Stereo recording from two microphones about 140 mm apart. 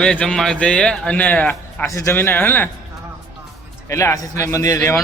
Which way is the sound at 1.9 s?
20° left (ahead or behind).